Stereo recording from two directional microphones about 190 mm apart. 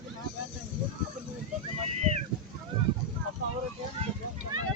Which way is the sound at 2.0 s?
35° right (ahead or behind).